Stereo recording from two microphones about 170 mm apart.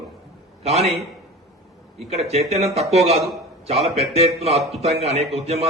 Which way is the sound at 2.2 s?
40° right (ahead or behind).